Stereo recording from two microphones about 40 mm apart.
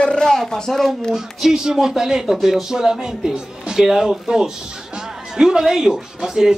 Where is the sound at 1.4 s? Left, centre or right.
Centre.